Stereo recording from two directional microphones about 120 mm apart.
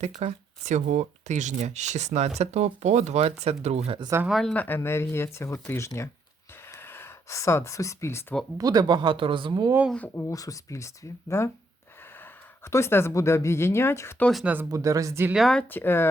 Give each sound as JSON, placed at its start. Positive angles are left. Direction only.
{"t": 0.2, "sound": "speech", "side_deg": -70}
{"t": 4.3, "sound": "speech", "side_deg": 0}
{"t": 4.5, "sound": "speech", "side_deg": 15}
{"t": 6.5, "sound": "a sound", "side_deg": 20}
{"t": 8.5, "sound": "speech", "side_deg": -35}
{"t": 9.9, "sound": "speech", "side_deg": 15}
{"t": 10.2, "sound": "speech", "side_deg": 30}
{"t": 14.4, "sound": "speech", "side_deg": -15}
{"t": 14.7, "sound": "speech", "side_deg": -30}
{"t": 15.3, "sound": "speech", "side_deg": 0}
{"t": 15.6, "sound": "speech", "side_deg": 15}